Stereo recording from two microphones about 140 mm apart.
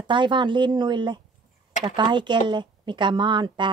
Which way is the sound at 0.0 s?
35° right (ahead or behind).